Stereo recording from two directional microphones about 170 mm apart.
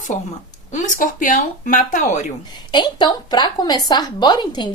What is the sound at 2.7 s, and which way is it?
A woman's voice, 25° left (ahead or behind).